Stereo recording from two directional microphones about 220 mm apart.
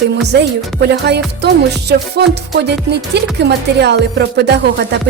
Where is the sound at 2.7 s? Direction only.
50° right (ahead or behind).